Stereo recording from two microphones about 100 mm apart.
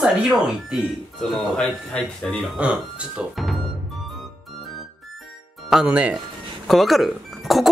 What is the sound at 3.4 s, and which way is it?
Music, centre (ahead or behind).